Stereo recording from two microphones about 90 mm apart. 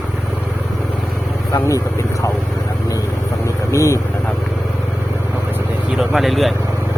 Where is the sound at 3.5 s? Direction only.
35° left (ahead or behind).